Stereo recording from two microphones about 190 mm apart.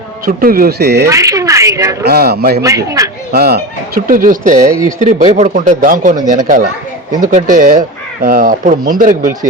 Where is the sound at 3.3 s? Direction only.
55° right (ahead or behind).